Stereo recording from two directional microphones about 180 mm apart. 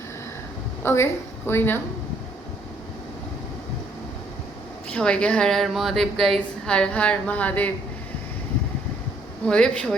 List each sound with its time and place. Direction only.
0.8 s a woman's voice: 15° left (ahead or behind)
4.9 s a woman's voice: 5° left (ahead or behind)
9.5 s a woman's voice: 5° left (ahead or behind)